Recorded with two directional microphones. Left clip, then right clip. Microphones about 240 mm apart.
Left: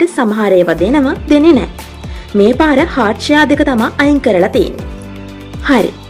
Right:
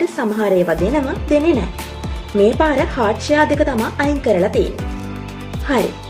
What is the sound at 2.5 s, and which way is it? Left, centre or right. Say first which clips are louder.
Speech: left 5 dB; left.